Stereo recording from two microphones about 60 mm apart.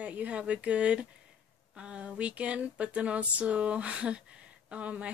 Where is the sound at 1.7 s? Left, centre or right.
Centre.